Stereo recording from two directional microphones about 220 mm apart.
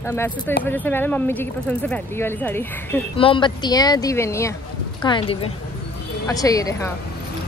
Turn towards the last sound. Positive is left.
turn(degrees=15)  # may be behind; listen again after turning